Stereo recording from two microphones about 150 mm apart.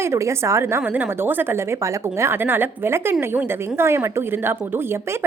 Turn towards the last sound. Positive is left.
turn(degrees=-15)  # may be behind; listen again after turning